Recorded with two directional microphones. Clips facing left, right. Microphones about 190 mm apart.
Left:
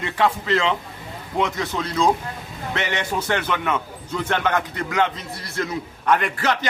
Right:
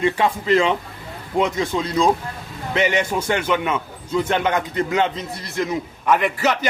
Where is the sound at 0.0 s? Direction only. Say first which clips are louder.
Right 2 dB; 15° right (ahead or behind).